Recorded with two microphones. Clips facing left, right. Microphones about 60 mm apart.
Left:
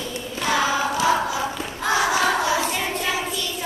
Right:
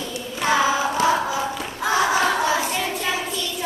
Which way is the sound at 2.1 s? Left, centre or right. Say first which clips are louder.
Right 1 dB; right.